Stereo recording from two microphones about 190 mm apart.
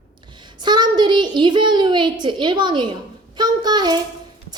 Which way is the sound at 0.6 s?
20° right (ahead or behind).